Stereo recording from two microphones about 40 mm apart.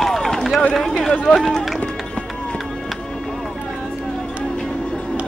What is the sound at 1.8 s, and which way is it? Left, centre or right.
Run, left.